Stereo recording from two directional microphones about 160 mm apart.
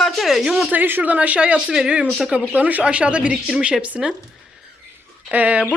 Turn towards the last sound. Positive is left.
turn(degrees=-10)  # may be behind; listen again after turning